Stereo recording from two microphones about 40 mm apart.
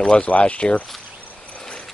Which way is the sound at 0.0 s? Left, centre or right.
Left.